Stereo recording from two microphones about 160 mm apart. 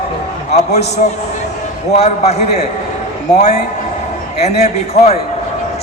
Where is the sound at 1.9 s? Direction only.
45° left (ahead or behind).